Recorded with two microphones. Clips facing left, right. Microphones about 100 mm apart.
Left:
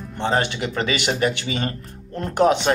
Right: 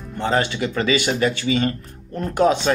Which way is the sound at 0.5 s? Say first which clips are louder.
Right 3 dB; 55° left (ahead or behind).